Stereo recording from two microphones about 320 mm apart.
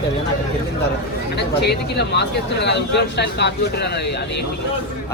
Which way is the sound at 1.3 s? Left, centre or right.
Left.